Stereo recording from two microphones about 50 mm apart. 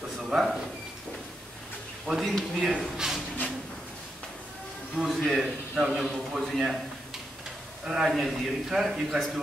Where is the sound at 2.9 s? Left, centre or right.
Centre.